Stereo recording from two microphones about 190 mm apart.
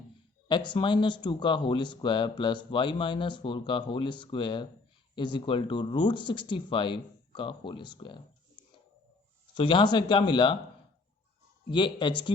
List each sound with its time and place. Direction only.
0.4 s speech: 25° left (ahead or behind)
9.6 s speech: 25° left (ahead or behind)
11.7 s speech: 25° left (ahead or behind)